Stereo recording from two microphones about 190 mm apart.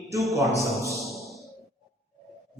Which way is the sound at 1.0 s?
Centre (ahead or behind).